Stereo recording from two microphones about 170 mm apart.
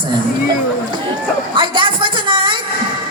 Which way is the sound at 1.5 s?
30° right (ahead or behind).